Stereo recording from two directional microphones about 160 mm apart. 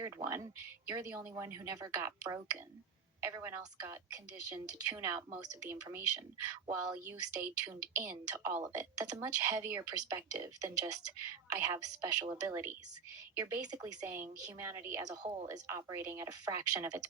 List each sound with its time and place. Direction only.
0.0 s speech: 20° right (ahead or behind)